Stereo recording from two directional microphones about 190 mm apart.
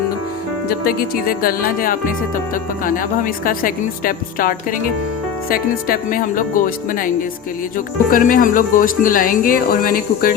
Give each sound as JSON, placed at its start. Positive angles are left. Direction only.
{"t": 0.7, "sound": "speech", "side_deg": 50}
{"t": 8.1, "sound": "speech", "side_deg": 45}